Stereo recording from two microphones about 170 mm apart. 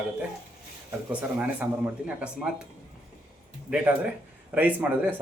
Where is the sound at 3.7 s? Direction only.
10° right (ahead or behind).